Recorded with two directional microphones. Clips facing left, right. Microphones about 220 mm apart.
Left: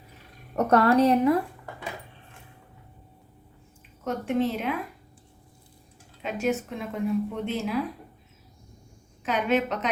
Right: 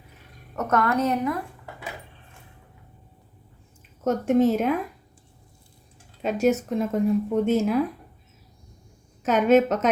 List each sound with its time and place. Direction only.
0.5 s a woman's voice: 30° left (ahead or behind)
4.0 s a woman's voice: 45° right (ahead or behind)
6.2 s a woman's voice: 40° right (ahead or behind)
9.2 s a woman's voice: 45° right (ahead or behind)